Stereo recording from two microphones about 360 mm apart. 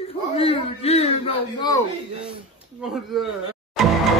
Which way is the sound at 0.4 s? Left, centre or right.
Centre.